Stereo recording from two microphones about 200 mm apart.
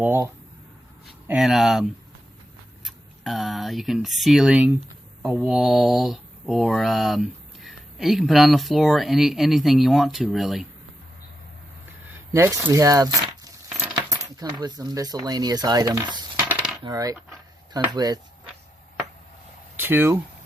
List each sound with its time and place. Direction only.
0.0 s speech: 10° right (ahead or behind)
1.3 s speech: centre (ahead or behind)
12.3 s speech: 15° right (ahead or behind)
19.7 s speech: 10° right (ahead or behind)